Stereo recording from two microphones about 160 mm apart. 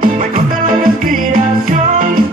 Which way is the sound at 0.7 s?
60° right (ahead or behind).